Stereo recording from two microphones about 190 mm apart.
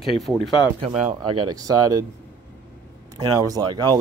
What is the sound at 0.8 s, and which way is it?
Speech, 35° right (ahead or behind).